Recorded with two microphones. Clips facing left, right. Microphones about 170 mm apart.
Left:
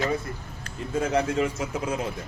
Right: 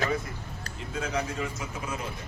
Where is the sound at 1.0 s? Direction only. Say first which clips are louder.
Left 7 dB; 65° left (ahead or behind).